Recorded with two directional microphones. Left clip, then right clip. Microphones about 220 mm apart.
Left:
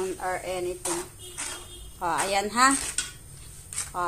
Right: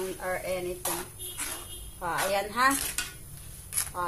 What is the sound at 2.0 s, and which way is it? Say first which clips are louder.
Speech: left 3 dB; 50° left (ahead or behind).